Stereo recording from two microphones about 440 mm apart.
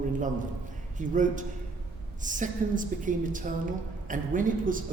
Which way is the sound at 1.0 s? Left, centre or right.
Centre.